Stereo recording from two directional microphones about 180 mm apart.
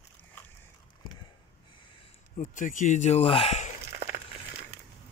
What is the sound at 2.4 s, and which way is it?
Speech, 45° left (ahead or behind).